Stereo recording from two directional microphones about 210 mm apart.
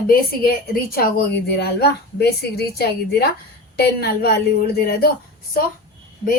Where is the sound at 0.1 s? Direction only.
45° left (ahead or behind).